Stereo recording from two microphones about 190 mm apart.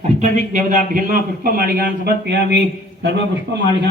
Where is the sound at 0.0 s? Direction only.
35° right (ahead or behind); by 3.6 s 65° right (ahead or behind).